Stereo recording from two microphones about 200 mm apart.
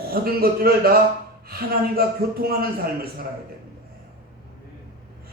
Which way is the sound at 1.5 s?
50° right (ahead or behind).